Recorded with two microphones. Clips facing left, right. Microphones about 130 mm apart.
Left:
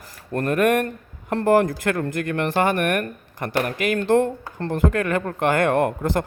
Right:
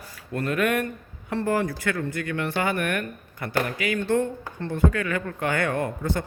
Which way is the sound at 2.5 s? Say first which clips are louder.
Left 6 dB; 45° left (ahead or behind).